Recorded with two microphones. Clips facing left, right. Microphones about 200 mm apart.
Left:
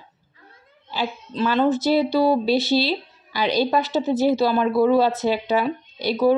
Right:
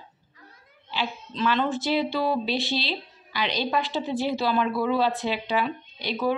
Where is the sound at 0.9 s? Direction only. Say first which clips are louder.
Left 4 dB; 40° left (ahead or behind).